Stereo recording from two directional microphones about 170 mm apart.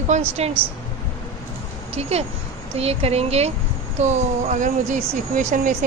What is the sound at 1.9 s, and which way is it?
Speech, 35° right (ahead or behind).